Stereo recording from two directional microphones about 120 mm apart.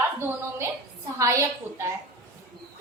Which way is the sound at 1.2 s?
25° right (ahead or behind).